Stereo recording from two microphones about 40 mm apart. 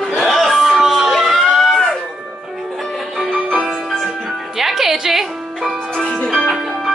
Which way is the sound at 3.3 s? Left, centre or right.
Centre.